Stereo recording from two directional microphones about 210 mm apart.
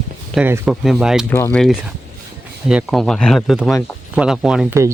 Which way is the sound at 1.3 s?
10° left (ahead or behind).